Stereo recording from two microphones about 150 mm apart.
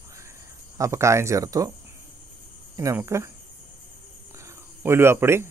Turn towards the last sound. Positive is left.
turn(degrees=-15)  # may be behind; listen again after turning